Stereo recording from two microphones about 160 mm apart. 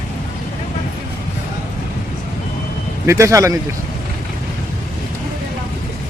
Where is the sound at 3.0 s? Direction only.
20° right (ahead or behind).